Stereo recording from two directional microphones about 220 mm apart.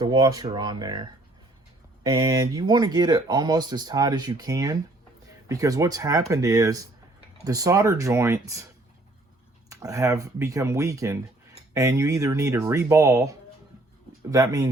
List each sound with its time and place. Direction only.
0.0 s speech: 15° right (ahead or behind)